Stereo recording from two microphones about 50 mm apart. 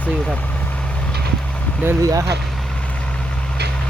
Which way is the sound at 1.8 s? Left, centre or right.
Right.